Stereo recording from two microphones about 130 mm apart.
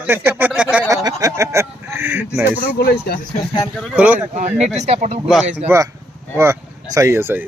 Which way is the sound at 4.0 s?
10° right (ahead or behind).